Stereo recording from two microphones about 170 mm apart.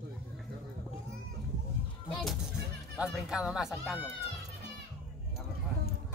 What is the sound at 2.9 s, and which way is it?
Speech, 5° right (ahead or behind).